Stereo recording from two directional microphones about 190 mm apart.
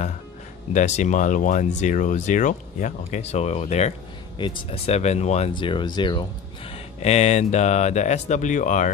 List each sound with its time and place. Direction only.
0.7 s speech: 40° left (ahead or behind)
4.4 s speech: 25° left (ahead or behind); by 8.9 s 40° left (ahead or behind)